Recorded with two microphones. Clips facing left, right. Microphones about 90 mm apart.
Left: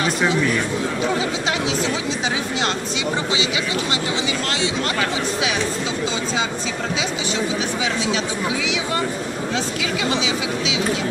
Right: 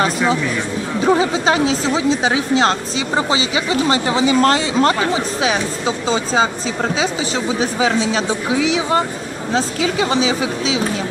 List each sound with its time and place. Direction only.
1.0 s speech: 35° right (ahead or behind)
7.6 s speech: 35° right (ahead or behind)